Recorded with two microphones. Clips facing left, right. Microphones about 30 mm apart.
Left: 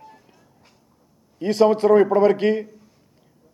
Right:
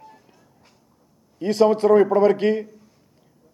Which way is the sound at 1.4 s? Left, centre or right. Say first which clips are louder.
Even; left.